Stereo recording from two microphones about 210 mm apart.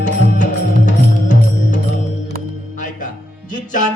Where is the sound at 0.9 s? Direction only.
35° left (ahead or behind).